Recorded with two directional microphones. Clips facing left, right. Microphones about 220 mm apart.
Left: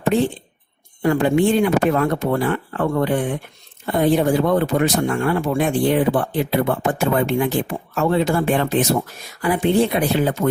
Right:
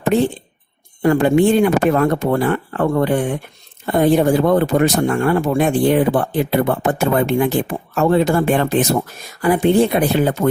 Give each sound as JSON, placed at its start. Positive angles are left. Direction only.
{"t": 1.0, "sound": "speech", "side_deg": -50}